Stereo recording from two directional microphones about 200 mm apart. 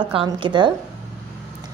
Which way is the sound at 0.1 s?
25° right (ahead or behind).